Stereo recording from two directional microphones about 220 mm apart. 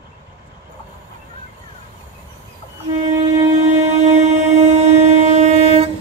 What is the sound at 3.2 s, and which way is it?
Train, 30° right (ahead or behind).